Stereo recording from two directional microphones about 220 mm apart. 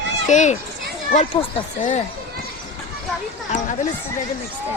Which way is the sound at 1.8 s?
35° left (ahead or behind).